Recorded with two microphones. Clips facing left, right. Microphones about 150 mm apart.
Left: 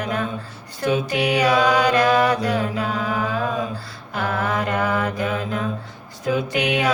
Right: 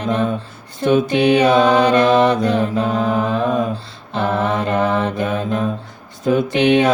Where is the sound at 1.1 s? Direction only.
25° right (ahead or behind).